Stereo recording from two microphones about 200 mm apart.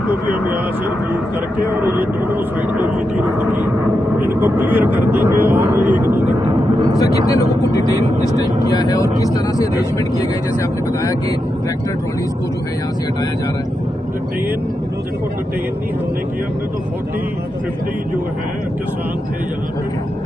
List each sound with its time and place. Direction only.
0.1 s speech: 10° right (ahead or behind)
1.7 s speech: 10° right (ahead or behind)
6.4 s a sound: 25° right (ahead or behind)
7.0 s speech: 15° left (ahead or behind)
8.7 s speech: 20° left (ahead or behind)